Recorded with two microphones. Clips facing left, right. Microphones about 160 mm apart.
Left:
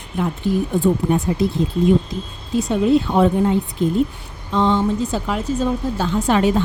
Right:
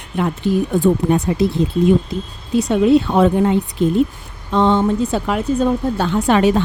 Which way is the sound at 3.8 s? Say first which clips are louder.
Right 4 dB; 75° right (ahead or behind).